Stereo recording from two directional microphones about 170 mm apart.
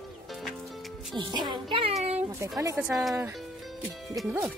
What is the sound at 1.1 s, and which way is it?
Speech, 25° right (ahead or behind).